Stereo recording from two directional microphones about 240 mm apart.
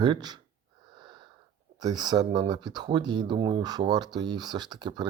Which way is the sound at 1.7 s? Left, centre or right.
Centre.